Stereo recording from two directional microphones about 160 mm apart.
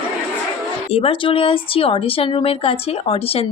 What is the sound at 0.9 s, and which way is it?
Speech, 35° left (ahead or behind).